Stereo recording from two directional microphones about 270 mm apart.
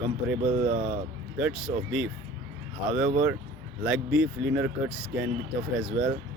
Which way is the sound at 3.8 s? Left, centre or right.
Centre.